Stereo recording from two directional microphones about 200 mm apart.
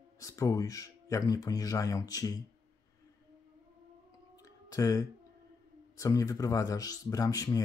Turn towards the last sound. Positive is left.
turn(degrees=15)  # may be behind; listen again after turning